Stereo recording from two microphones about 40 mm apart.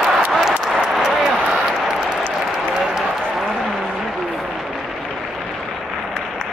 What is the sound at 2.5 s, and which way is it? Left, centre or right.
Applause, centre.